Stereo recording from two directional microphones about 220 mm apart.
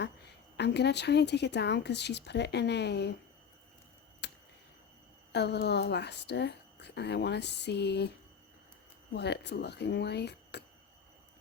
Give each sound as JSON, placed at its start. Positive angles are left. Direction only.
{"t": 0.5, "sound": "speech", "side_deg": 50}
{"t": 4.2, "sound": "a sound", "side_deg": 50}
{"t": 5.3, "sound": "speech", "side_deg": 50}
{"t": 9.1, "sound": "speech", "side_deg": 50}